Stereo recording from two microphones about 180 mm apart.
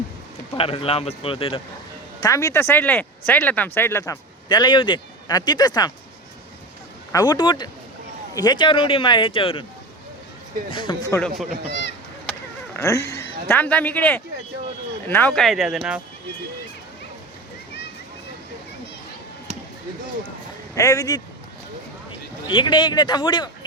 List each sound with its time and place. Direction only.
0.5 s a man's voice: 30° left (ahead or behind)
2.2 s speech: 15° left (ahead or behind)
7.1 s speech: 20° left (ahead or behind)
10.7 s speech: 25° left (ahead or behind)
11.1 s speech: 5° left (ahead or behind)
12.7 s speech: 15° left (ahead or behind); by 16.0 s 5° right (ahead or behind)
20.7 s speech: 20° left (ahead or behind)
22.4 s speech: 25° left (ahead or behind)